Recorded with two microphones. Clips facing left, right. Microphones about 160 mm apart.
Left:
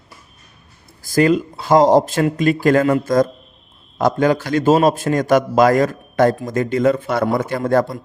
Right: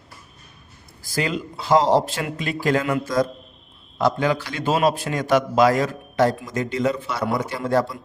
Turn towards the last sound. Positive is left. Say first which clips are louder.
# left 5 dB
turn(degrees=50)  # may be behind; listen again after turning